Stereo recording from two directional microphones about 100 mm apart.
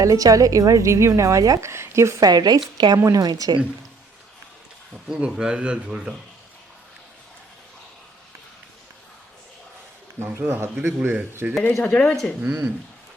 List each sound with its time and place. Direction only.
0.0 s a woman's voice: 35° right (ahead or behind)
5.0 s speech: 5° right (ahead or behind)
10.2 s speech: 25° right (ahead or behind)
11.8 s speech: 10° left (ahead or behind)
12.4 s speech: 10° right (ahead or behind)